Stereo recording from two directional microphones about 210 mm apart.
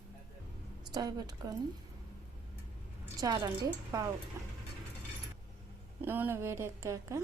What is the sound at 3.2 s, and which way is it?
A woman's voice, 20° right (ahead or behind).